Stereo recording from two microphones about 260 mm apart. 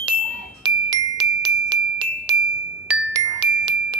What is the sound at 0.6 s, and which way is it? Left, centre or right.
Glockenspiel, centre.